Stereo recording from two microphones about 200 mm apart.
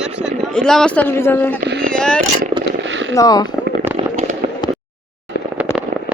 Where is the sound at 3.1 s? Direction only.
20° left (ahead or behind).